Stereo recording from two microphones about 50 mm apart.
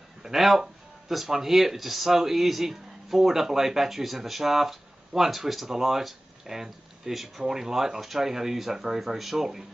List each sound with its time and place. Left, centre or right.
0.2 s speech: centre